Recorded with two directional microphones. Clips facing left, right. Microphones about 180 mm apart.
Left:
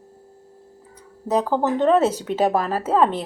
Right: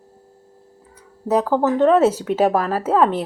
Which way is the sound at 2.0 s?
10° right (ahead or behind).